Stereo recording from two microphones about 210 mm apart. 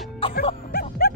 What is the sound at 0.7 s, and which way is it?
Music, 45° left (ahead or behind).